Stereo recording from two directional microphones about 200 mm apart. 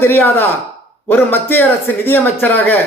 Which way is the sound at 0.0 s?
10° left (ahead or behind).